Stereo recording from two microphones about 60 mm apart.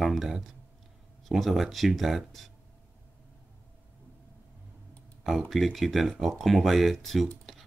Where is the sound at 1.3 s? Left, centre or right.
Centre.